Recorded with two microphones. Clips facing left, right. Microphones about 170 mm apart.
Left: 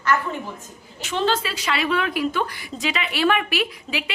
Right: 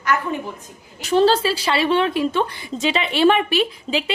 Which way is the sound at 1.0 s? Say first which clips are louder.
Right 7 dB; 35° right (ahead or behind).